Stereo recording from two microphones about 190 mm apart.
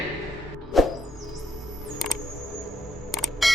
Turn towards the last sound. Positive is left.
turn(degrees=0)  # may be behind; listen again after turning